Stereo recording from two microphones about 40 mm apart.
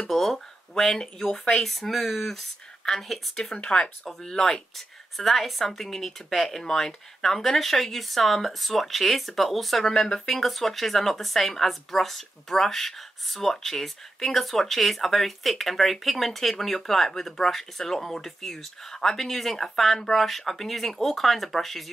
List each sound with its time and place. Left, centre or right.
0.1 s speech: centre
1.6 s speech: centre
3.5 s speech: left; by 9.9 s centre
9.9 s speech: centre
10.2 s speech: centre